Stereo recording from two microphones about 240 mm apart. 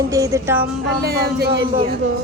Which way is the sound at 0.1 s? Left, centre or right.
Centre.